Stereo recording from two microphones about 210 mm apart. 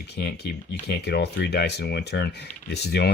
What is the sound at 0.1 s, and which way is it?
Speech, 50° left (ahead or behind).